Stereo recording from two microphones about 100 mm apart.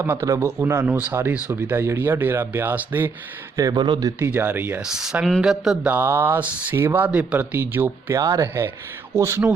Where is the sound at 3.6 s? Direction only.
45° right (ahead or behind).